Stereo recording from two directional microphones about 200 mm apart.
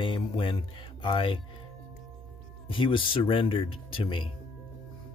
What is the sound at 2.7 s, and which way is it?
Speech, 25° left (ahead or behind).